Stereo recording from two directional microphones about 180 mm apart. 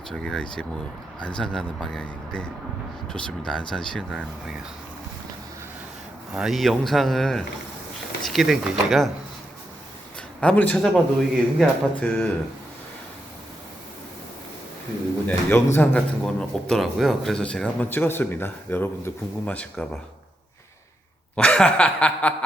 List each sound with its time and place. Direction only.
0.1 s a man's voice: 5° left (ahead or behind)
6.3 s a man's voice: centre (ahead or behind)
10.4 s a man's voice: 10° left (ahead or behind)
15.3 s speech: 10° left (ahead or behind)
21.3 s chuckle: 5° left (ahead or behind)